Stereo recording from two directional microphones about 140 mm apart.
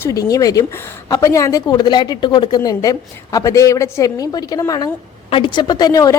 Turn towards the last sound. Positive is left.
turn(degrees=25)  # may be behind; listen again after turning